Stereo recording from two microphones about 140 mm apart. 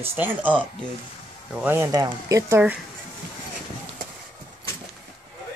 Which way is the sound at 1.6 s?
15° right (ahead or behind).